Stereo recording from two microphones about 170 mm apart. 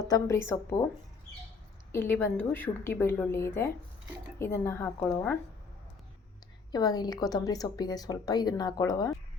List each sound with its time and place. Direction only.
0.1 s a woman's voice: 15° left (ahead or behind)
1.9 s a woman's voice: 15° left (ahead or behind)
6.7 s a woman's voice: 25° left (ahead or behind)